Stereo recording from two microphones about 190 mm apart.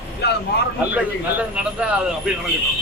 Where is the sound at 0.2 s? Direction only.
60° left (ahead or behind).